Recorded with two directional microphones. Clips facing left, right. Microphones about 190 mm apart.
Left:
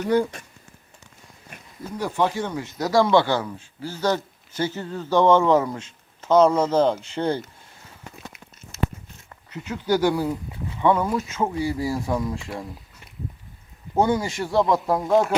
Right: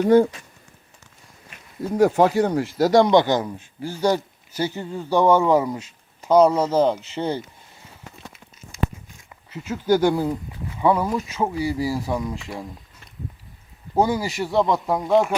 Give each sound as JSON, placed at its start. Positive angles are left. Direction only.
{"t": 0.0, "sound": "speech", "side_deg": -50}
{"t": 2.0, "sound": "speech", "side_deg": -45}
{"t": 9.8, "sound": "speech", "side_deg": -15}
{"t": 13.9, "sound": "speech", "side_deg": -5}